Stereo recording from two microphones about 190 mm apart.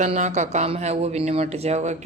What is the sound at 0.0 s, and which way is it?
A woman's voice, 35° right (ahead or behind).